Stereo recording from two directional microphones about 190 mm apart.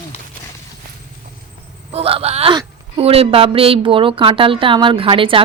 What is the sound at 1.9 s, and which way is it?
A woman's voice, 30° right (ahead or behind).